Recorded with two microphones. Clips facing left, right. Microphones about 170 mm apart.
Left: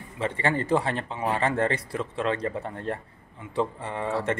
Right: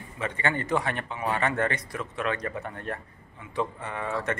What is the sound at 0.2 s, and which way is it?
Speech, 30° left (ahead or behind).